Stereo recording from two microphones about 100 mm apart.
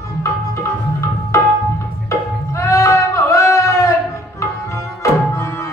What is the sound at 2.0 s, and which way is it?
Music, 30° left (ahead or behind).